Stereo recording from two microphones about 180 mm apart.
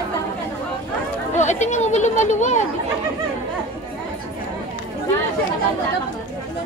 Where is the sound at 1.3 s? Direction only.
40° left (ahead or behind).